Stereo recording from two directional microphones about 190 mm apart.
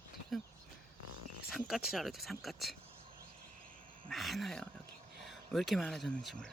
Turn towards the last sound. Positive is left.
turn(degrees=5)  # may be behind; listen again after turning